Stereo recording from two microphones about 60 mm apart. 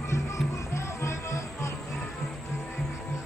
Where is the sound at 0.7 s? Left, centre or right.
Left.